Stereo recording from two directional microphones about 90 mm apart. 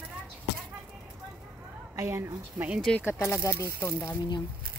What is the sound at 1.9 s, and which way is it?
Speech, 35° right (ahead or behind).